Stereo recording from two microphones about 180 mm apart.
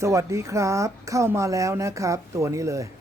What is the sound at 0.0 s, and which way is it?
Speech, 15° right (ahead or behind).